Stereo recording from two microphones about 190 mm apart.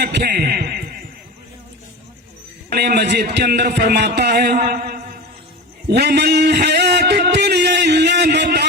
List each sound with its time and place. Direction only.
0.0 s a man's voice: 60° right (ahead or behind)
2.7 s a man's voice: 55° right (ahead or behind)
5.9 s a sound: 60° right (ahead or behind)